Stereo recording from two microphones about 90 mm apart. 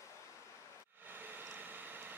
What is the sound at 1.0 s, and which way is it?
Vehicle, 20° right (ahead or behind).